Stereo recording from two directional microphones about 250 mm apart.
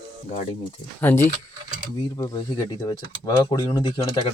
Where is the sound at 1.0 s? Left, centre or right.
Centre.